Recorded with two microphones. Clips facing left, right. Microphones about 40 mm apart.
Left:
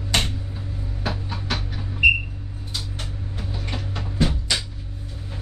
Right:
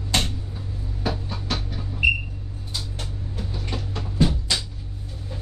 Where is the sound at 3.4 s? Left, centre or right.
Centre.